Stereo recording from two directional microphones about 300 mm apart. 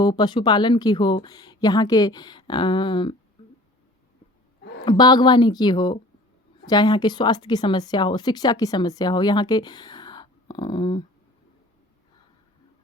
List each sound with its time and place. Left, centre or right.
0.0 s speech: centre
3.4 s a sound: centre
4.9 s speech: centre